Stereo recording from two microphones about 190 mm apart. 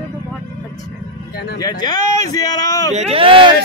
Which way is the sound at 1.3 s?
55° left (ahead or behind).